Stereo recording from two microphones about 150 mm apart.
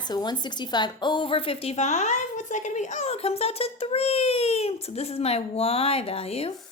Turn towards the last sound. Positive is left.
turn(degrees=40)  # may be behind; listen again after turning